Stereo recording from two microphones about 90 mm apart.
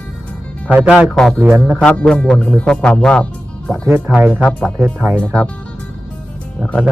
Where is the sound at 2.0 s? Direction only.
5° left (ahead or behind).